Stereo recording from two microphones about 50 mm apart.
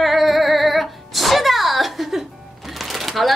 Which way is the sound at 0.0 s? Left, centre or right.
Centre.